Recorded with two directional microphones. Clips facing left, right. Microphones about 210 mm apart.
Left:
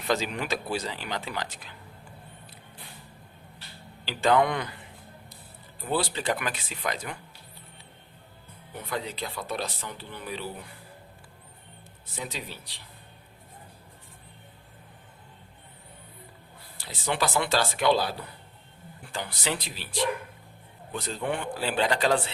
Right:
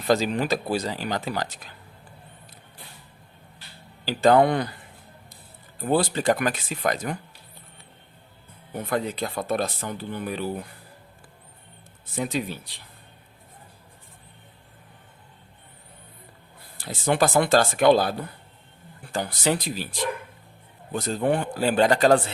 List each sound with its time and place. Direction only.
0.1 s speech: 35° right (ahead or behind)
4.0 s speech: 40° right (ahead or behind)
5.8 s speech: 45° right (ahead or behind)
8.7 s speech: 50° right (ahead or behind)
12.1 s speech: 50° right (ahead or behind)
16.7 s speech: 50° right (ahead or behind)